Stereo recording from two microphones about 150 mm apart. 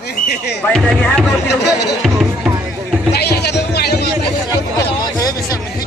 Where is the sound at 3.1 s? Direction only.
90° left.